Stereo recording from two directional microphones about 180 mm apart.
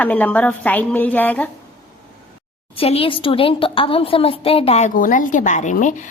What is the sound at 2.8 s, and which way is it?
A woman's voice, 30° left (ahead or behind).